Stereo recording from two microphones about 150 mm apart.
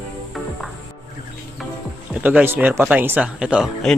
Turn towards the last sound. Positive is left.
turn(degrees=-5)  # may be behind; listen again after turning